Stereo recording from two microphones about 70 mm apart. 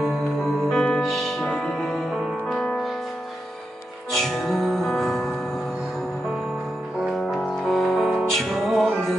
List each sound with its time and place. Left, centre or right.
0.7 s music: centre
4.1 s music: centre
7.0 s music: centre